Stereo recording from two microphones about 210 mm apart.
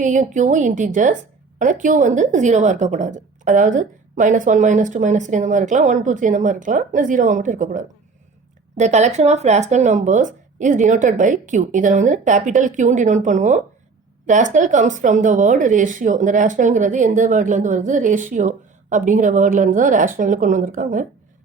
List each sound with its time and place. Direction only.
0.0 s a woman's voice: 35° right (ahead or behind)